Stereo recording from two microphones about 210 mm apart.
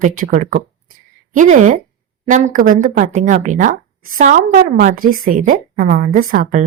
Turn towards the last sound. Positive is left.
turn(degrees=-40)  # may be behind; listen again after turning